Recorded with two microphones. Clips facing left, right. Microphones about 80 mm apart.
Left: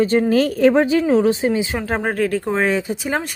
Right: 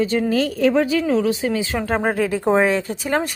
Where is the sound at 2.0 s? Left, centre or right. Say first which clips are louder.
Even; centre.